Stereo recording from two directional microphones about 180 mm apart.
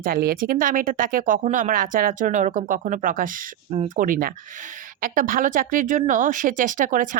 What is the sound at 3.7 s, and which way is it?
Speech, 35° right (ahead or behind).